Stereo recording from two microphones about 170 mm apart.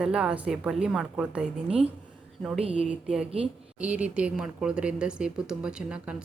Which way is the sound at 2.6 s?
35° right (ahead or behind).